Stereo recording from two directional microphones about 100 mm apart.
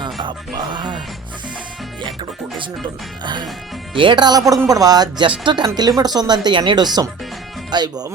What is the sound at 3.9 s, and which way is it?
Speech, 50° right (ahead or behind).